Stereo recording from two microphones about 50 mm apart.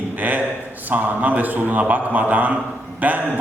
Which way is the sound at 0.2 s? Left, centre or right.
Right.